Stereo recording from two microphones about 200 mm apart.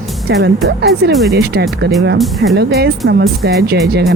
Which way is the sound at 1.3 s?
55° right (ahead or behind).